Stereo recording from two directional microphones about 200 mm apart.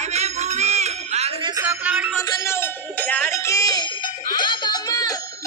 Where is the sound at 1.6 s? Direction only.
10° right (ahead or behind).